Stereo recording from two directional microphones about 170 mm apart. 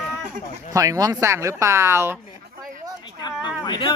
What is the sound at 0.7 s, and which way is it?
Speech, 20° right (ahead or behind).